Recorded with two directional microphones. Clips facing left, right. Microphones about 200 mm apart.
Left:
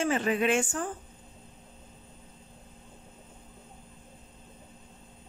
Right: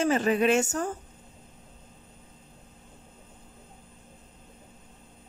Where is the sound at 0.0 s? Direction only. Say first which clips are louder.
Right 3 dB; 40° right (ahead or behind).